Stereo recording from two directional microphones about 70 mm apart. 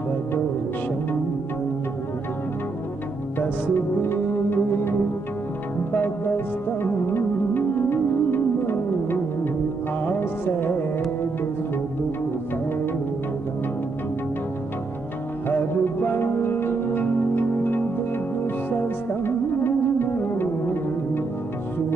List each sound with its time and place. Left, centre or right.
3.3 s music: left
5.9 s music: left
15.4 s music: left
19.2 s music: left